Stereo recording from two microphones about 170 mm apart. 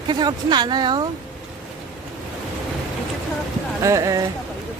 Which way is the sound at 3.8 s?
20° right (ahead or behind).